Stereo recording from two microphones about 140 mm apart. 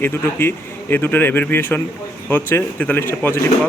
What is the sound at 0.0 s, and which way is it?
Speech, 15° left (ahead or behind).